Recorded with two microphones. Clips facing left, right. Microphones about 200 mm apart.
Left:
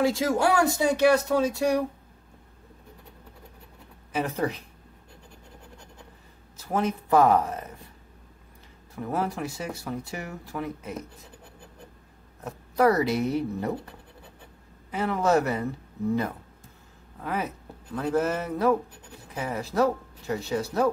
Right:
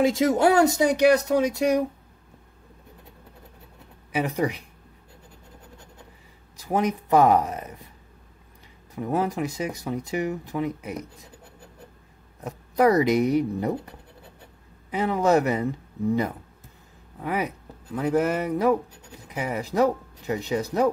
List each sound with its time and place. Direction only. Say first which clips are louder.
0.0 s speech: right 4 dB; 20° right (ahead or behind)
4.1 s speech: right 2 dB; 15° right (ahead or behind)
6.5 s speech: right 3 dB; 15° right (ahead or behind)
8.9 s speech: right 4 dB; 15° right (ahead or behind)
12.4 s speech: right 2 dB; 15° right (ahead or behind)
14.9 s speech: right 3 dB; 15° right (ahead or behind)
17.2 s speech: right 3 dB; 15° right (ahead or behind)